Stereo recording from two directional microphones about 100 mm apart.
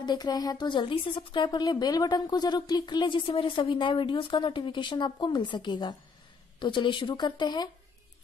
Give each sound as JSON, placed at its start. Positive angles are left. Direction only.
{"t": 0.0, "sound": "speech", "side_deg": 45}
{"t": 1.6, "sound": "speech", "side_deg": 40}
{"t": 3.3, "sound": "speech", "side_deg": 60}